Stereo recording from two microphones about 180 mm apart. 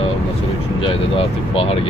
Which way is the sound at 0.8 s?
30° left (ahead or behind).